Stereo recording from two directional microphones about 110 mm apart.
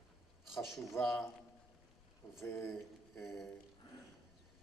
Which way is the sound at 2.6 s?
Centre (ahead or behind).